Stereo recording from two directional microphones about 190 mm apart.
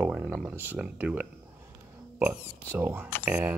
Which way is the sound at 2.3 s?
15° left (ahead or behind).